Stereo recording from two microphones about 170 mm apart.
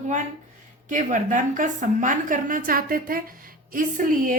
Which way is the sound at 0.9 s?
50° right (ahead or behind).